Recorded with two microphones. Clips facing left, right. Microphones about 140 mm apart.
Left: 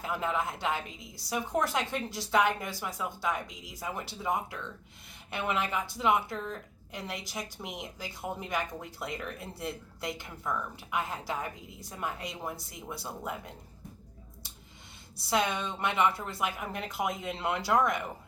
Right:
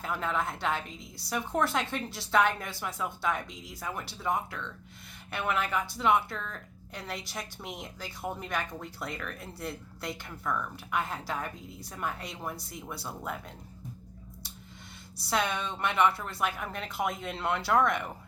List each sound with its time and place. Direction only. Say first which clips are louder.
0.0 s a woman's voice: even; 15° left (ahead or behind)
15.3 s speech: left 1 dB; 20° left (ahead or behind)